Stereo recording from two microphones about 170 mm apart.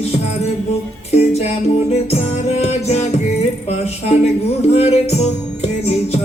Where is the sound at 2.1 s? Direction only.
35° left (ahead or behind).